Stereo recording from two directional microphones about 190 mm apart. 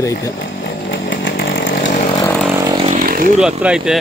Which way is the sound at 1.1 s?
75° left (ahead or behind).